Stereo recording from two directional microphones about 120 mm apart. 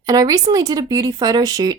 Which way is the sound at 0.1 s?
30° right (ahead or behind).